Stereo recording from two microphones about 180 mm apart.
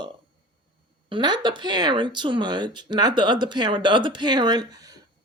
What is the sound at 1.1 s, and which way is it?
Speech, 25° right (ahead or behind).